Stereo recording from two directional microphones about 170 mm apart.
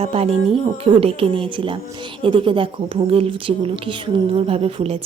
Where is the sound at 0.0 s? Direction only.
35° right (ahead or behind).